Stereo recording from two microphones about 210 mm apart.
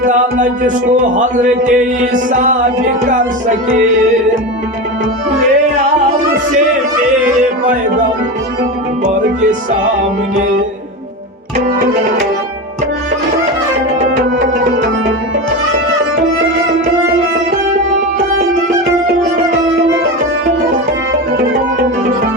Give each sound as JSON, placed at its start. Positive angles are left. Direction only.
{"t": 0.0, "sound": "speech", "side_deg": -35}